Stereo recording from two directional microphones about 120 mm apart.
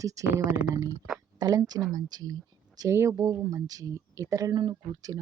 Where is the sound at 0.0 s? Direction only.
30° right (ahead or behind).